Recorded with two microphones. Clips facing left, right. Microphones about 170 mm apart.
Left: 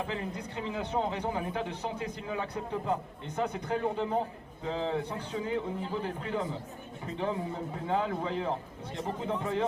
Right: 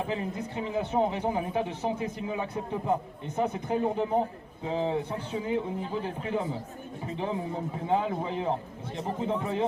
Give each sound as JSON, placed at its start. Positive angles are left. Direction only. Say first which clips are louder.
{"t": 0.1, "sound": "a man's voice", "louder": "right 4 dB", "side_deg": -20}